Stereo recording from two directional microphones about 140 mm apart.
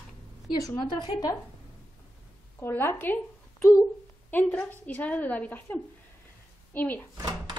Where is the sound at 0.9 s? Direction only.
30° left (ahead or behind).